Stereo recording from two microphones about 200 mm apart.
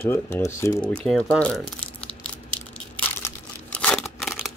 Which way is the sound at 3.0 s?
10° left (ahead or behind).